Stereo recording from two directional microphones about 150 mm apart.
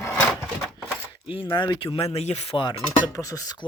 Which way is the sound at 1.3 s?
35° left (ahead or behind).